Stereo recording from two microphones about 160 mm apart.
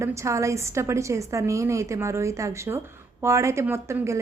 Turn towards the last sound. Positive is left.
turn(degrees=-15)  # may be behind; listen again after turning